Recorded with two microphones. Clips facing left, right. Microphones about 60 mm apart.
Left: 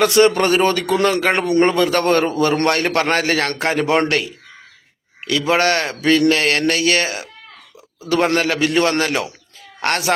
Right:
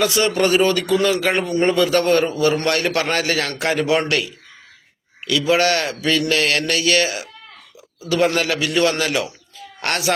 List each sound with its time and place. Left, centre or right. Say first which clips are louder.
0.0 s a man's voice: left 4 dB; left
5.2 s a man's voice: left 1 dB; left